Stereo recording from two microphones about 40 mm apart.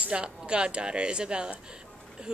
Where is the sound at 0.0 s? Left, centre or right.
Right.